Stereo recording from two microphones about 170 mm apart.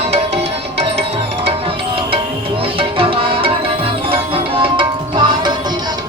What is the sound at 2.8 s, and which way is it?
Music, 35° right (ahead or behind).